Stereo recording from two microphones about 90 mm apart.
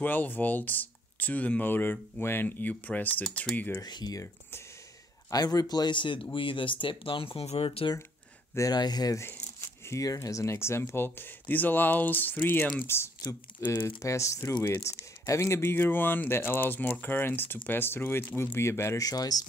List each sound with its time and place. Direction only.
0.0 s speech: 20° left (ahead or behind)
3.8 s speech: 50° left (ahead or behind)
4.2 s speech: 30° left (ahead or behind)
5.3 s speech: 45° left (ahead or behind); by 7.9 s 90° left
8.5 s speech: 45° left (ahead or behind)
9.2 s speech: 30° left (ahead or behind)
19.0 s speech: 45° left (ahead or behind)